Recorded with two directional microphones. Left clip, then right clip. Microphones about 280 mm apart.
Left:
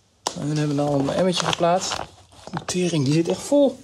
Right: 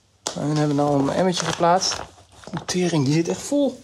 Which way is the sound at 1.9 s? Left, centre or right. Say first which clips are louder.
Right 1 dB; centre.